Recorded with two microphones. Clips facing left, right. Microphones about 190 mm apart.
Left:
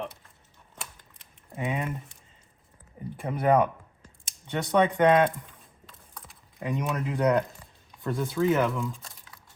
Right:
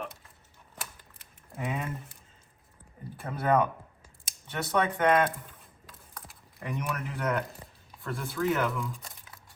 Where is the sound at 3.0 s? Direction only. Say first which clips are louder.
Left 4 dB; 15° left (ahead or behind).